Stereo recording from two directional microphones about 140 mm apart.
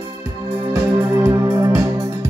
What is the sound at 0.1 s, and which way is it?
Music, 25° right (ahead or behind).